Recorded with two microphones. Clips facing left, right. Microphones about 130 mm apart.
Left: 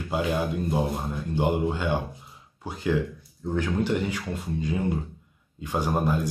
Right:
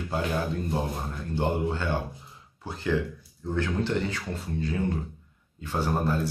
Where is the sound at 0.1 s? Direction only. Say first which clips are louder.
Left 3 dB; 15° left (ahead or behind).